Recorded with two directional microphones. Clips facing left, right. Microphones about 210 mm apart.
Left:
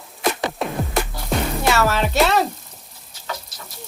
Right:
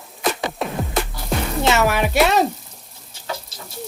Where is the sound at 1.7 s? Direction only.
15° right (ahead or behind).